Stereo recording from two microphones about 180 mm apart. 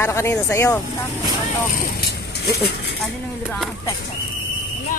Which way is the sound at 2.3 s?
65° left (ahead or behind).